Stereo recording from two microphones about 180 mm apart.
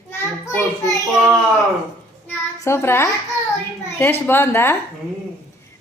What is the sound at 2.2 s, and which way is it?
Child singing, 15° left (ahead or behind).